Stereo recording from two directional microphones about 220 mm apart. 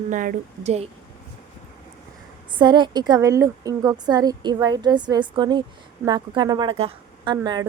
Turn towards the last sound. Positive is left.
turn(degrees=-20)  # may be behind; listen again after turning